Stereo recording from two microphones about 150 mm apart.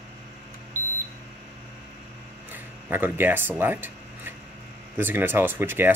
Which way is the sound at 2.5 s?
15° right (ahead or behind).